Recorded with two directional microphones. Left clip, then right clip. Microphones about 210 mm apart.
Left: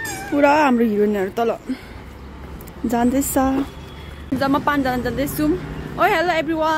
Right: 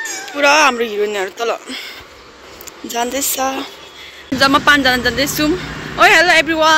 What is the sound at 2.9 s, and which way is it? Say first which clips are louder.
Speech: even; 15° left (ahead or behind).